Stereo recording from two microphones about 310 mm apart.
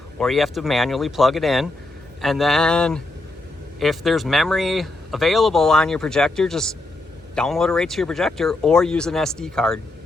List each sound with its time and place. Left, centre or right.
0.2 s speech: centre